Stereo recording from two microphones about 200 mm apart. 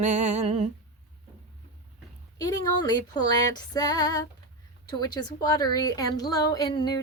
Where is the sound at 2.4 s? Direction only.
20° left (ahead or behind).